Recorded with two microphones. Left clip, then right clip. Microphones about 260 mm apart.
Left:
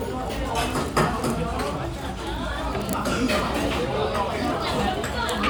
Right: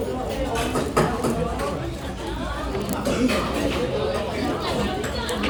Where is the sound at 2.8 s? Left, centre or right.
Centre.